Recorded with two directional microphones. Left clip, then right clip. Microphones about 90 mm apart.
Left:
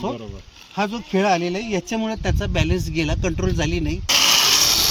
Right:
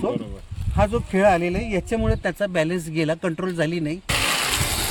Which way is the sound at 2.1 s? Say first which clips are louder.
Right 3 dB; 45° right (ahead or behind).